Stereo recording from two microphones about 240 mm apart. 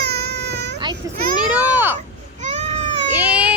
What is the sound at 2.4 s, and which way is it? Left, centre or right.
Baby cry, right.